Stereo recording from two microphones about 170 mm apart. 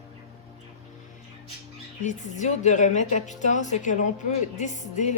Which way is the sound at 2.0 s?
45° left (ahead or behind).